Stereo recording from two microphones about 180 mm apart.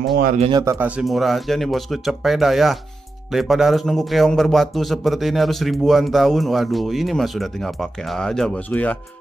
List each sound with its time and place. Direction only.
0.1 s speech: 50° right (ahead or behind)
0.4 s speech: 25° right (ahead or behind)
0.7 s a man's voice: 5° right (ahead or behind); by 8.9 s 10° left (ahead or behind)